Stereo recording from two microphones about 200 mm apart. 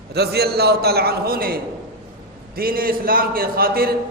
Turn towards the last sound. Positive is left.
turn(degrees=-50)  # may be behind; listen again after turning